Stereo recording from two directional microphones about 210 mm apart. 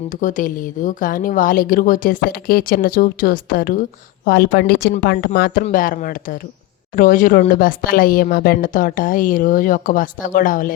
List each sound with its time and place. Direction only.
0.2 s speech: 40° left (ahead or behind)